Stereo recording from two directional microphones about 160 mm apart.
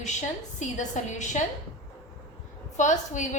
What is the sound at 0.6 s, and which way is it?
Speech, 50° left (ahead or behind).